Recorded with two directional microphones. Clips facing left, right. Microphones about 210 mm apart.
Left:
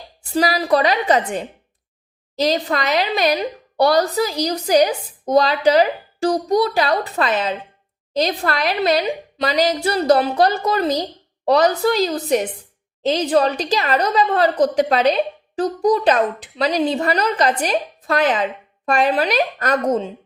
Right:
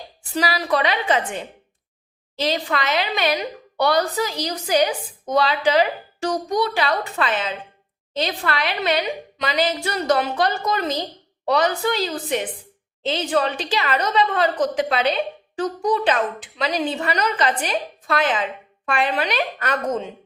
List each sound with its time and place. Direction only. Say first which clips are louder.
0.3 s a woman's voice: left 5 dB; 35° left (ahead or behind)